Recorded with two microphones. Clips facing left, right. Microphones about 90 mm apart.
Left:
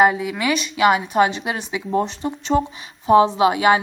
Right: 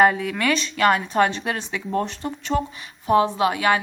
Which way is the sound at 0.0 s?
5° left (ahead or behind).